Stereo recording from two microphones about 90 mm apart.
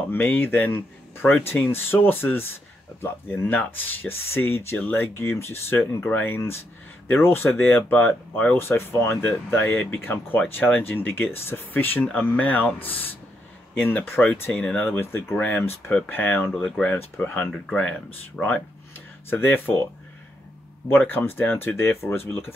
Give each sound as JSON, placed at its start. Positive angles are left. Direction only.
{"t": 0.0, "sound": "speech", "side_deg": 20}
{"t": 14.5, "sound": "speech", "side_deg": 15}
{"t": 20.9, "sound": "speech", "side_deg": 20}